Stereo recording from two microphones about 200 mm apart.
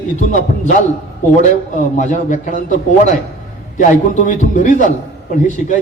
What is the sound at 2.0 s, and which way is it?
A man's voice, 40° left (ahead or behind).